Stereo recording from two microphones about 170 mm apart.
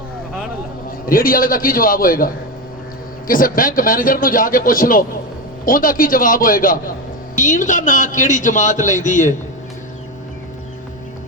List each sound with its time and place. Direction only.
0.9 s a man's voice: 55° left (ahead or behind)